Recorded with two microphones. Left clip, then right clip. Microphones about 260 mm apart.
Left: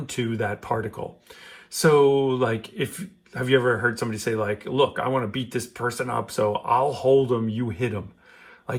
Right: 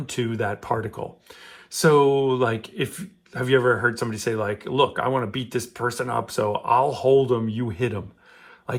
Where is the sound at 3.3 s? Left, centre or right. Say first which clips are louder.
Right 1 dB; right.